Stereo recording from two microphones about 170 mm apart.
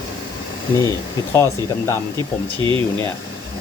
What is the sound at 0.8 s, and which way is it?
Speech, 20° left (ahead or behind).